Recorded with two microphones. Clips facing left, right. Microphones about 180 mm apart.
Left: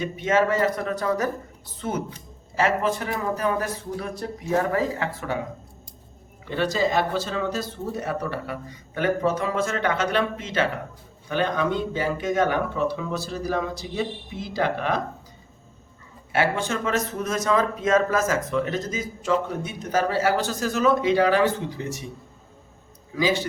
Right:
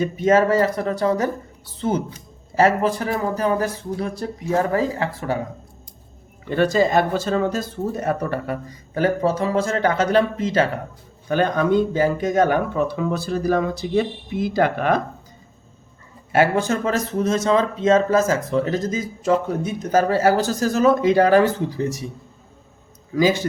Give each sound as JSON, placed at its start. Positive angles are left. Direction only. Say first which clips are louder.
{"t": 0.0, "sound": "speech", "louder": "right 5 dB", "side_deg": -40}
{"t": 6.5, "sound": "speech", "louder": "right 6 dB", "side_deg": -50}
{"t": 9.0, "sound": "speech", "louder": "right 3 dB", "side_deg": -35}
{"t": 16.3, "sound": "speech", "louder": "right 6 dB", "side_deg": -45}
{"t": 23.1, "sound": "speech", "louder": "right 5 dB", "side_deg": -45}